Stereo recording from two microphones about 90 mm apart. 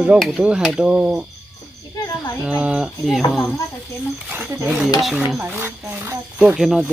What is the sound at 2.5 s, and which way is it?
Speech, 15° right (ahead or behind).